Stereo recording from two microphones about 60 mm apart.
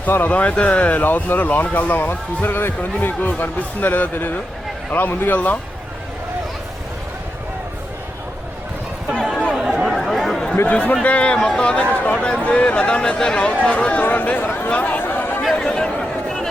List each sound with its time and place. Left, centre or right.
0.3 s a man's voice: left
9.6 s chatter: centre
10.7 s speech: left
14.7 s a sound: left
15.5 s chatter: centre